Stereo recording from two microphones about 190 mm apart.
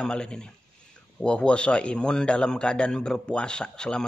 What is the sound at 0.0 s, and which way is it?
A man's voice, 5° left (ahead or behind).